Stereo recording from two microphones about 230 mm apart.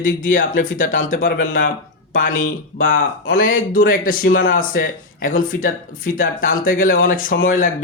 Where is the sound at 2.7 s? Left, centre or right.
Left.